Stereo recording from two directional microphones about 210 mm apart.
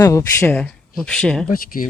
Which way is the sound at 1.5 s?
45° left (ahead or behind).